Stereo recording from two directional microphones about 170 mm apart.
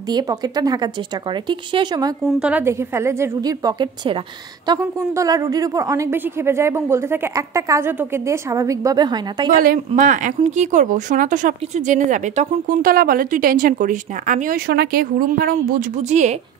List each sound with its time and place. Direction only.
0.1 s a woman's voice: 20° right (ahead or behind)
2.2 s a woman's voice: 5° right (ahead or behind); by 9.6 s 25° right (ahead or behind)
9.6 s speech: 55° right (ahead or behind)
16.0 s speech: 40° right (ahead or behind)